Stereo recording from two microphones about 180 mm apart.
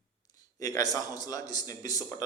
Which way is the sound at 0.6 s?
20° left (ahead or behind).